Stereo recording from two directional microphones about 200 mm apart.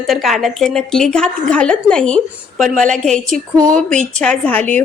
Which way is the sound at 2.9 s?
5° left (ahead or behind).